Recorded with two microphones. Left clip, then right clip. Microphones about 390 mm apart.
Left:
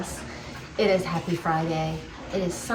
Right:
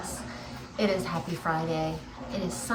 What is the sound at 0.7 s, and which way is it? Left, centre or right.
Speech, centre.